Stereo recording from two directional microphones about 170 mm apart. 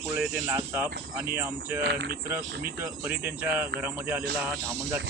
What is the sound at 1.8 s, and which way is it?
Speech, 70° right (ahead or behind).